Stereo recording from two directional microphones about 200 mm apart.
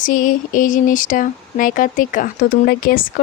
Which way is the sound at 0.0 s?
40° left (ahead or behind).